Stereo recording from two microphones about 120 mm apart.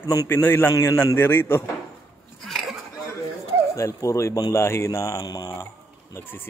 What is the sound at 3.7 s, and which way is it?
Speech, 25° left (ahead or behind).